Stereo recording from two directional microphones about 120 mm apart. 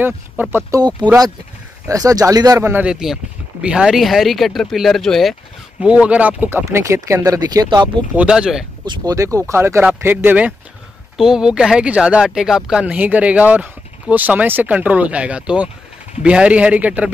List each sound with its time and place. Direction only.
0.0 s speech: 15° right (ahead or behind)
0.7 s speech: 35° right (ahead or behind)
2.7 s speech: 5° right (ahead or behind)
5.8 s speech: 10° right (ahead or behind)
6.6 s speech: 25° right (ahead or behind)
7.6 s speech: 40° right (ahead or behind)
8.1 s speech: 10° right (ahead or behind)
8.8 s speech: 40° right (ahead or behind)
9.1 s speech: 25° right (ahead or behind); by 17.1 s 10° right (ahead or behind)